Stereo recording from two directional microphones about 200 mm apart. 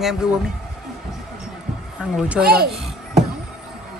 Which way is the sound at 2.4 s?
50° right (ahead or behind).